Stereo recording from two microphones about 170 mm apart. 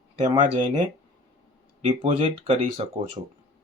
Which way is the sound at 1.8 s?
35° right (ahead or behind).